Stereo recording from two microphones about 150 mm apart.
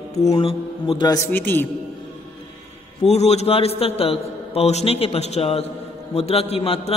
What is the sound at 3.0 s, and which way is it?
A man's voice, 45° left (ahead or behind).